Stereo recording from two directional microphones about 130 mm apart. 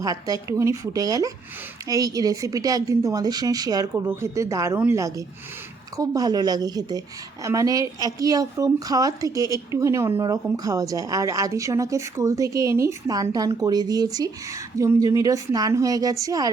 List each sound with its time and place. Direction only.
0.0 s a woman's voice: 25° right (ahead or behind)